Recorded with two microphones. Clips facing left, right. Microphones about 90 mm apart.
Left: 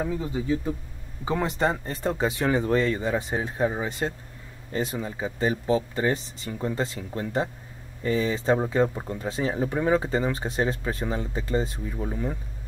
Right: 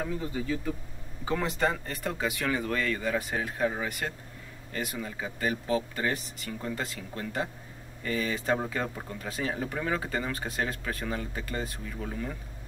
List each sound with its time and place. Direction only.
0.0 s speech: 20° left (ahead or behind)